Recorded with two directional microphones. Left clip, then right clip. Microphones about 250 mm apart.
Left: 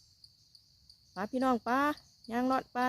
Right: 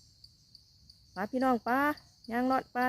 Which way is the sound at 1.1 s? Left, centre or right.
Centre.